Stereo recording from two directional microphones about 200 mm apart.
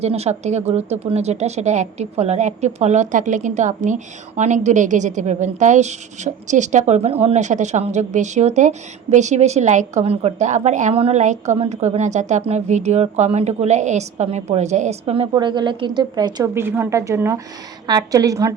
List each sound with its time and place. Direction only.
0.0 s a woman's voice: 30° right (ahead or behind); by 18.5 s 15° right (ahead or behind)